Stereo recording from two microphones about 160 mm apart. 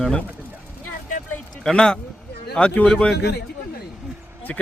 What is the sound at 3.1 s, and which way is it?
Speech, 90° left.